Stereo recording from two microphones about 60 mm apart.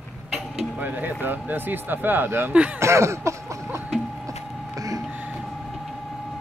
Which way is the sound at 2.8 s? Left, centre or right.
Right.